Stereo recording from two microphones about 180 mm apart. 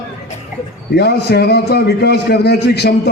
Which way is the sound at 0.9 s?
65° left (ahead or behind).